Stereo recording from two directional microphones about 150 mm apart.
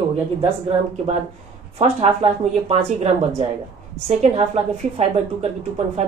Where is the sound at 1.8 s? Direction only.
45° right (ahead or behind).